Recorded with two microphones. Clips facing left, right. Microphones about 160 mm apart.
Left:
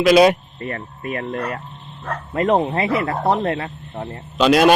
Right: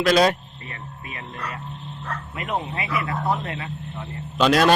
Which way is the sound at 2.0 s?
40° left (ahead or behind).